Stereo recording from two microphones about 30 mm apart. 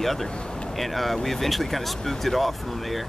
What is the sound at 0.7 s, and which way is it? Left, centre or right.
Speech, centre.